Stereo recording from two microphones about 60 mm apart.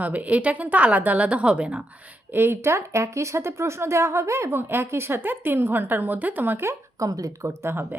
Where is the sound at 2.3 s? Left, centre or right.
Right.